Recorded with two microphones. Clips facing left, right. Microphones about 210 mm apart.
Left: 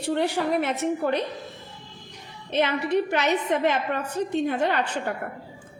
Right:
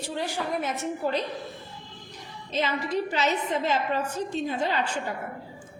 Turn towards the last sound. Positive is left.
turn(degrees=60)  # may be behind; listen again after turning